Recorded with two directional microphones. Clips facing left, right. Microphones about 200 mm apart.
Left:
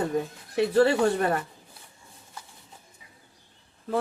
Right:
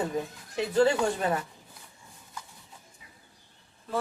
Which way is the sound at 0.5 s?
65° left (ahead or behind).